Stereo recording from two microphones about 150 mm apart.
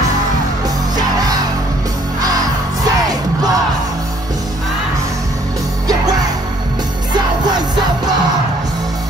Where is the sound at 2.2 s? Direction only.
25° right (ahead or behind).